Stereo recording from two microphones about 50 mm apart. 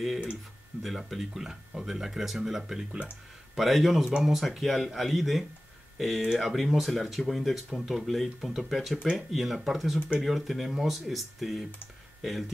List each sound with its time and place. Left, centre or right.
0.8 s speech: centre
9.9 s speech: centre
10.2 s speech: centre